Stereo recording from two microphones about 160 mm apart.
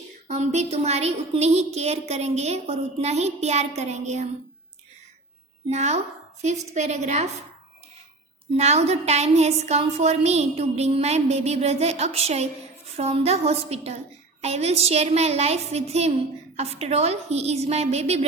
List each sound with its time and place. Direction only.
0.3 s a woman's voice: 45° right (ahead or behind)
5.6 s a woman's voice: 45° right (ahead or behind)
8.5 s a woman's voice: 45° right (ahead or behind)